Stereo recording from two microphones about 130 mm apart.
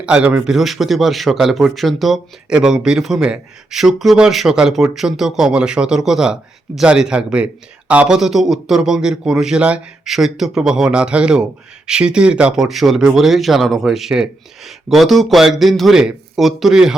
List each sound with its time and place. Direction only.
0.0 s a man's voice: 10° right (ahead or behind)